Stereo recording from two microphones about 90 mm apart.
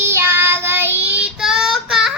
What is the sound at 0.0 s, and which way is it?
Child singing, 30° right (ahead or behind).